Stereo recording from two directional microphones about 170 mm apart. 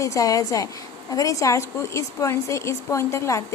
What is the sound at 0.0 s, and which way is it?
A woman's voice, 20° left (ahead or behind).